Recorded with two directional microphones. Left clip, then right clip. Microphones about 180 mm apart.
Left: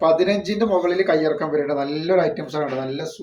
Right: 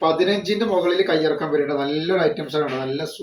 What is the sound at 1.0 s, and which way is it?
Speech, 20° left (ahead or behind).